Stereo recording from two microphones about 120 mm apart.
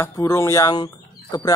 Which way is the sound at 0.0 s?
25° left (ahead or behind).